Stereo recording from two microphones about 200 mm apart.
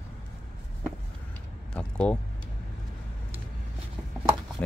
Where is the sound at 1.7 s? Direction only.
5° left (ahead or behind).